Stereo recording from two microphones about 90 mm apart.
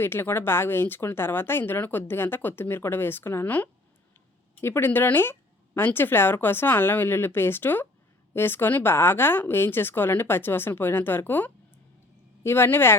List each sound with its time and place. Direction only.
0.0 s a woman's voice: 25° left (ahead or behind)